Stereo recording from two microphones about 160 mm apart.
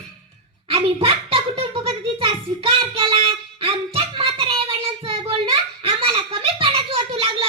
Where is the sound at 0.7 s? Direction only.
35° right (ahead or behind).